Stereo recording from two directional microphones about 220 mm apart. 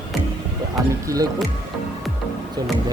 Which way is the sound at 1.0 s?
15° right (ahead or behind).